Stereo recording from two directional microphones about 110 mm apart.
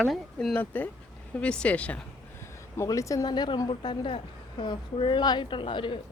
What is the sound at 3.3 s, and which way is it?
A woman's voice, 40° left (ahead or behind).